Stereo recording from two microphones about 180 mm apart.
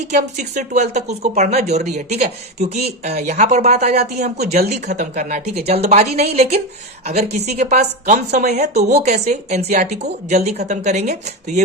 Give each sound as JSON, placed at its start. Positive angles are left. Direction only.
{"t": 0.1, "sound": "a woman's voice", "side_deg": -40}